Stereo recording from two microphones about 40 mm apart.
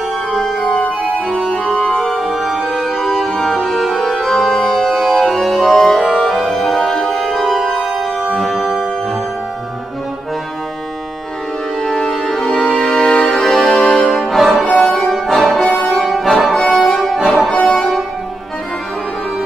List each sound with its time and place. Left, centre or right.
0.3 s organ: centre
6.0 s music: centre
11.8 s music: centre
13.4 s music: centre
14.7 s music: left
15.1 s music: centre
15.8 s brass instrument: centre
16.1 s music: centre
16.6 s accordion: centre
17.0 s music: centre